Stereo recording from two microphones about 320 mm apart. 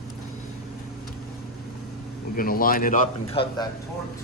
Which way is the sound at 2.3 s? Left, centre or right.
Left.